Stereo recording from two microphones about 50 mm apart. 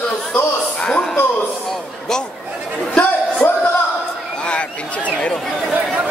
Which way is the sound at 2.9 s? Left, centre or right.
Left.